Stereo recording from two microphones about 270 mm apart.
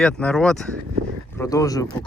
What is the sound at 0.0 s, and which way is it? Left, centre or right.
Speech, centre.